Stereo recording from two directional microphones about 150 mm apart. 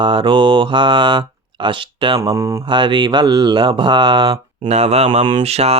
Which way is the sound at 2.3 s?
20° right (ahead or behind).